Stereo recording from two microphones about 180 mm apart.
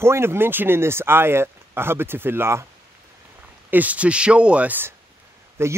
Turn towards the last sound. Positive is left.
turn(degrees=-15)  # may be behind; listen again after turning